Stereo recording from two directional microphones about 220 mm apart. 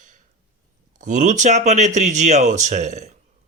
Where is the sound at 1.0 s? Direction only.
35° right (ahead or behind).